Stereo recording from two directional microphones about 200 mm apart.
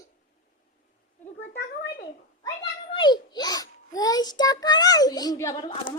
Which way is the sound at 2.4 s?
25° left (ahead or behind).